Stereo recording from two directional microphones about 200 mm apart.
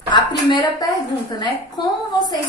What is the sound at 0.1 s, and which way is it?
A woman's voice, 20° left (ahead or behind).